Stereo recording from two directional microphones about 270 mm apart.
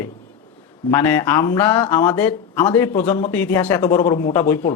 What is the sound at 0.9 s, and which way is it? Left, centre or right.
Speech, centre.